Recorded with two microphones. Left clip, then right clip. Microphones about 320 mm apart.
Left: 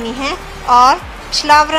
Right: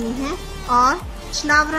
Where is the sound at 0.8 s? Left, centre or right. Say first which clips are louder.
Left 6 dB; centre.